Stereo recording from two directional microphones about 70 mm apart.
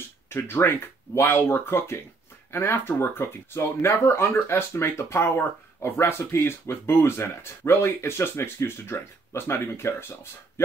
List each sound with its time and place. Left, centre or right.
0.3 s speech: left